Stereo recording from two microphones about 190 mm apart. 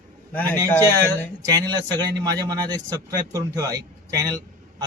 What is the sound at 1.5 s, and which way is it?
A man's voice, 20° right (ahead or behind).